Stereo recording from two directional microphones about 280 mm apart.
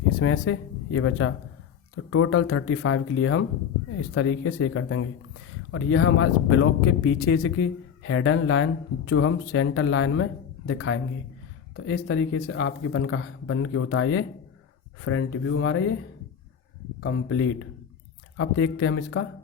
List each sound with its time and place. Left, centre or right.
0.2 s speech: left
17.0 s speech: left